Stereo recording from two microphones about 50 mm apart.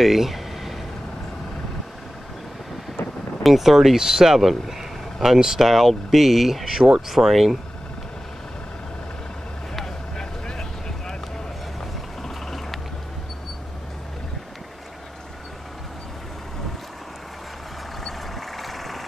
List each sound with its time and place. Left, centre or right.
0.0 s a sound: centre
3.0 s vehicle: left
3.4 s speech: centre
10.1 s vehicle: centre
18.0 s vehicle: centre